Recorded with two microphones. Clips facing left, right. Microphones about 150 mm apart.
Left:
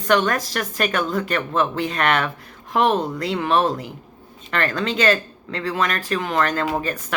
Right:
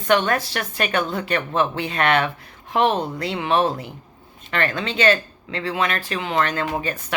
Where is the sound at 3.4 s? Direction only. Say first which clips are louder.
Even; 45° left (ahead or behind).